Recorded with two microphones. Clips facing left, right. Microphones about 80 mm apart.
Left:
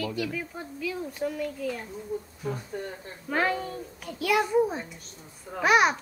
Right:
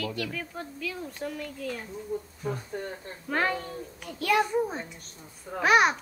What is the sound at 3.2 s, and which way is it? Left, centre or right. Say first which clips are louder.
A child's voice: left 1 dB; centre.